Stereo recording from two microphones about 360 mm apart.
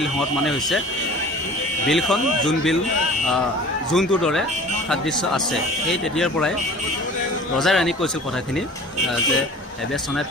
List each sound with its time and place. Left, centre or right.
0.0 s speech: centre
1.9 s speech: centre
3.9 s speech: centre
5.9 s speech: centre
7.5 s speech: centre